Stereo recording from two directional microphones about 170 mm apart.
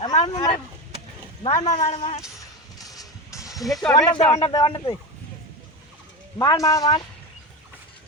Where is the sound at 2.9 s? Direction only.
20° left (ahead or behind).